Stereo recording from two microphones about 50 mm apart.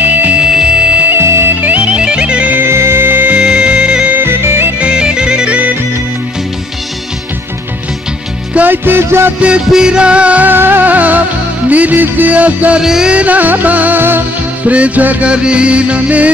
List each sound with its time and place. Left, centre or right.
0.0 s music: right
0.4 s music: centre
1.2 s music: right
1.6 s music: right
2.7 s music: right
3.3 s music: centre
4.1 s music: right
4.7 s music: centre
8.5 s music: right
9.7 s music: centre
10.4 s music: right
12.8 s music: centre
13.1 s music: right
14.7 s music: right